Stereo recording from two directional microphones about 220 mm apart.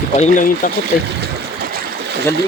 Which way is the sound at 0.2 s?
35° left (ahead or behind).